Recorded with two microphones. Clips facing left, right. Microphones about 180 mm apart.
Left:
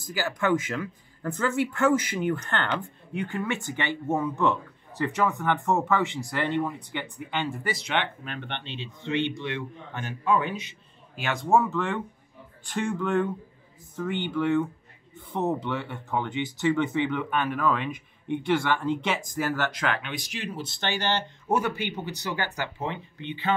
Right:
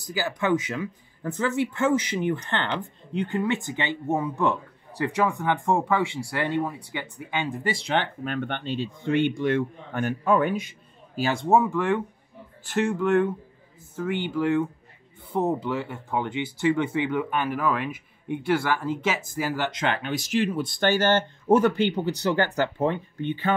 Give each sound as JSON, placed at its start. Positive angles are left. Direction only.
{"t": 0.2, "sound": "speech", "side_deg": -15}
{"t": 7.7, "sound": "speech", "side_deg": -35}
{"t": 11.1, "sound": "speech", "side_deg": -30}
{"t": 11.4, "sound": "speech", "side_deg": -15}
{"t": 19.7, "sound": "speech", "side_deg": -25}
{"t": 20.0, "sound": "speech", "side_deg": -40}
{"t": 21.5, "sound": "speech", "side_deg": -30}
{"t": 22.0, "sound": "speech", "side_deg": 15}
{"t": 22.8, "sound": "speech", "side_deg": -50}